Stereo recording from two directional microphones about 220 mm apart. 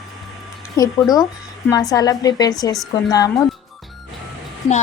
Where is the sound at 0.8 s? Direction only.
15° left (ahead or behind).